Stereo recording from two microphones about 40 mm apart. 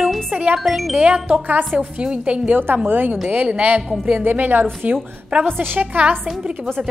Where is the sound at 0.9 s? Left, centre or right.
Right.